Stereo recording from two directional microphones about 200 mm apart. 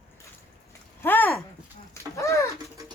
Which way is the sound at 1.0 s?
10° left (ahead or behind).